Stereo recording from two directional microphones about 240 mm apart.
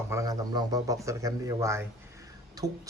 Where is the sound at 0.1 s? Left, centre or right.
Centre.